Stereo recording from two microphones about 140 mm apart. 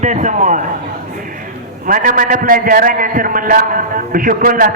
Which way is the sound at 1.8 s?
75° right (ahead or behind).